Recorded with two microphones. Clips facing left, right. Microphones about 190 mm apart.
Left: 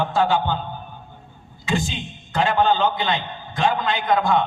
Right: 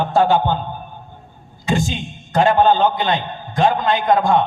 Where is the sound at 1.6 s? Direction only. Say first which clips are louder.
Right 4 dB; 40° right (ahead or behind).